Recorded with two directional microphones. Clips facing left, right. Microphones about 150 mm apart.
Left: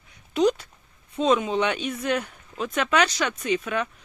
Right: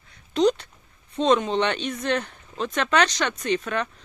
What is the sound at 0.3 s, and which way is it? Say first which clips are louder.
Speech: right 1 dB; 10° left (ahead or behind).